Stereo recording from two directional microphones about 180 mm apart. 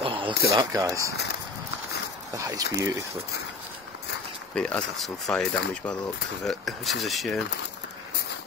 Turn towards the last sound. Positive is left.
turn(degrees=0)  # may be behind; listen again after turning